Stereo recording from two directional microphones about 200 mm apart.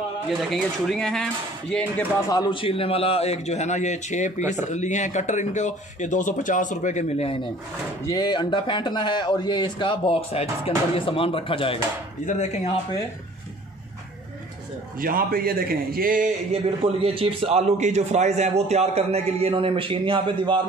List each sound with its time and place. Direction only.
0.3 s speech: centre (ahead or behind)
2.2 s speech: 20° left (ahead or behind); by 4.3 s 35° left (ahead or behind)
4.4 s speech: 10° right (ahead or behind)
4.6 s a man's voice: 35° left (ahead or behind)
8.0 s a man's voice: 20° left (ahead or behind); by 12.7 s 35° left (ahead or behind)
15.0 s a man's voice: 45° right (ahead or behind)
16.8 s a man's voice: 25° right (ahead or behind)